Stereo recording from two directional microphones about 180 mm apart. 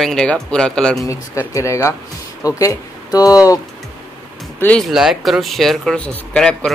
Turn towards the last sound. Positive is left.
turn(degrees=5)  # may be behind; listen again after turning